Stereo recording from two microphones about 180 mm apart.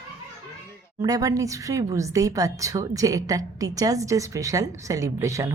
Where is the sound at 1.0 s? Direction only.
20° right (ahead or behind).